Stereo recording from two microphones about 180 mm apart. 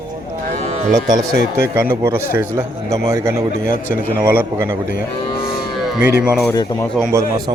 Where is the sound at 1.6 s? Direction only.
15° right (ahead or behind).